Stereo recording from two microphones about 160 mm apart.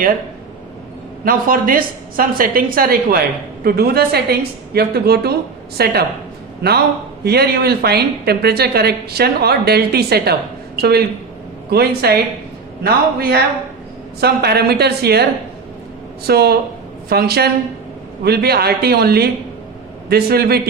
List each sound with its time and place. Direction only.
1.2 s a woman's voice: 60° right (ahead or behind); by 20.6 s 80° right